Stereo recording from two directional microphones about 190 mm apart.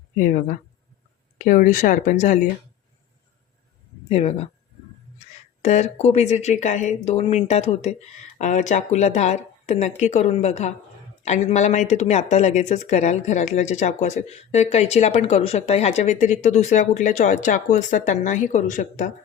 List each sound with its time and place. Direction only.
0.2 s speech: 45° left (ahead or behind)
4.1 s speech: 35° left (ahead or behind)
5.6 s speech: 35° left (ahead or behind)